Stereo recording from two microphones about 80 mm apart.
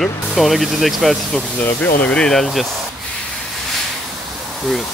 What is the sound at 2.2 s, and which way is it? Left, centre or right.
Speech, centre.